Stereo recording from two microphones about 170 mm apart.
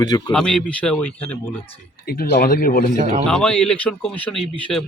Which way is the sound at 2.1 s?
75° left (ahead or behind).